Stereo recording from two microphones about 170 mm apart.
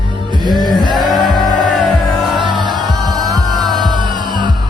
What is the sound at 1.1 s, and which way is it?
Music, centre (ahead or behind).